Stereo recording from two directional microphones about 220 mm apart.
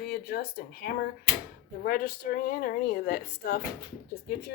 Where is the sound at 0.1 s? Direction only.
45° left (ahead or behind).